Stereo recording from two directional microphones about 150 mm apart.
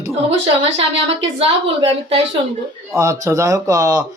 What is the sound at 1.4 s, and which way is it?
Speech, 40° right (ahead or behind).